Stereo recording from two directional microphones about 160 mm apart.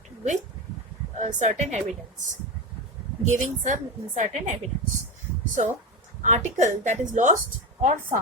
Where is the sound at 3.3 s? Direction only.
50° right (ahead or behind).